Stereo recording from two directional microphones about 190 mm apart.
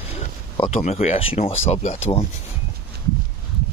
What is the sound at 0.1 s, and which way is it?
Speech, 30° left (ahead or behind).